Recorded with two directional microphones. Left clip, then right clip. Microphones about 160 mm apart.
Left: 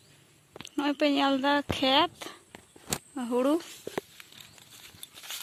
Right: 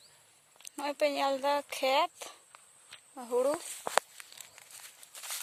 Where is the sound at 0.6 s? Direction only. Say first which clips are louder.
Left 3 dB; 15° right (ahead or behind).